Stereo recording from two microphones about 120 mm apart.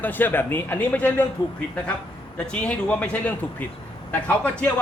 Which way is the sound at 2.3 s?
10° left (ahead or behind).